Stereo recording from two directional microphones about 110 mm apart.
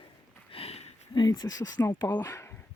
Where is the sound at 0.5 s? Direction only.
65° left (ahead or behind).